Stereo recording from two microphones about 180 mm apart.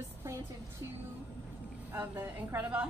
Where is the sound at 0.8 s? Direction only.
15° right (ahead or behind).